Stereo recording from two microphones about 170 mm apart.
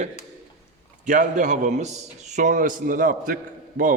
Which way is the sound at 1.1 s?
50° right (ahead or behind).